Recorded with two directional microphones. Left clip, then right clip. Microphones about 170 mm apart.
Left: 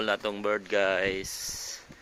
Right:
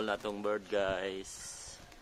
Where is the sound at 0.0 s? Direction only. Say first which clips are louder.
Left 6 dB; 20° left (ahead or behind).